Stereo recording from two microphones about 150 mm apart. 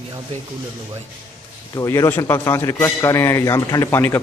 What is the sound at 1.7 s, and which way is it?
A man's voice, 20° left (ahead or behind).